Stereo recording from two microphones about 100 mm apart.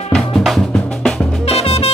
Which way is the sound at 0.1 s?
Centre (ahead or behind).